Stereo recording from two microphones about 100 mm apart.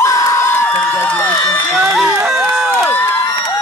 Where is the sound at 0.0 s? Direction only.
35° left (ahead or behind).